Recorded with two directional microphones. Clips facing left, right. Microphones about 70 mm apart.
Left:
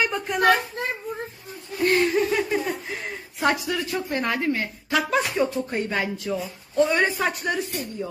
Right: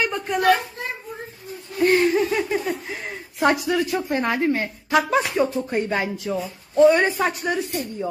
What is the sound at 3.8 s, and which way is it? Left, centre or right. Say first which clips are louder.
Speech: right 3 dB; centre.